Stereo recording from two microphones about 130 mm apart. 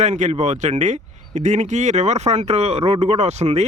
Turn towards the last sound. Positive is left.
turn(degrees=-60)  # may be behind; listen again after turning